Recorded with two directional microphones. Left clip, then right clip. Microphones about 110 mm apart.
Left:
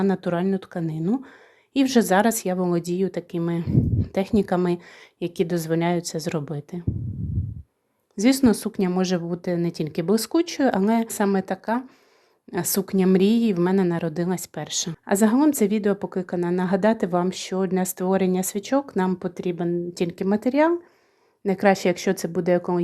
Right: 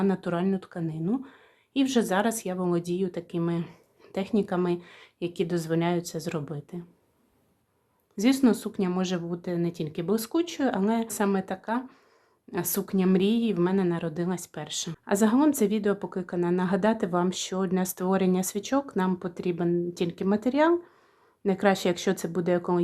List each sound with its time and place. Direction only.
0.0 s speech: 25° left (ahead or behind)
4.1 s speech: 35° left (ahead or behind)
8.1 s a woman's voice: 30° left (ahead or behind)